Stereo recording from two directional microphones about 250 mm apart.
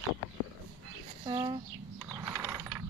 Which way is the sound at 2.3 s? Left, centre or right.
Centre.